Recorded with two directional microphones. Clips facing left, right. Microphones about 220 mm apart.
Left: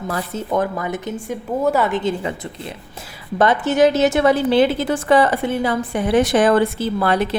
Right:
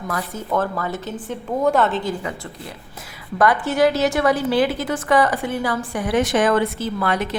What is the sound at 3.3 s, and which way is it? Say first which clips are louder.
A woman's voice: left 2 dB; 25° left (ahead or behind).